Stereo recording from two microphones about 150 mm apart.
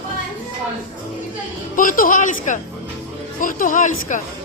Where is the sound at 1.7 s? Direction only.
65° left (ahead or behind).